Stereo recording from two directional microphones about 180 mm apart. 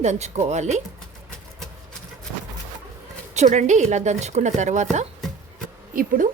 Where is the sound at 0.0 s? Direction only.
40° right (ahead or behind).